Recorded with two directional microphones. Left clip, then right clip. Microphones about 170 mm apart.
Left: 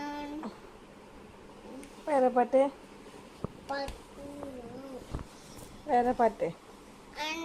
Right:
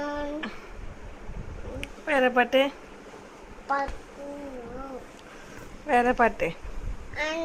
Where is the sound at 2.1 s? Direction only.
20° right (ahead or behind).